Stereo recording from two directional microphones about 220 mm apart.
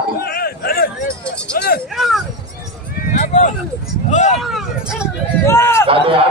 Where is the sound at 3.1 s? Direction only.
35° left (ahead or behind).